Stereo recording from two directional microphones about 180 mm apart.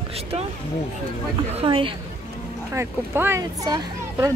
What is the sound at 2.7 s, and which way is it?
A child's voice, 15° right (ahead or behind).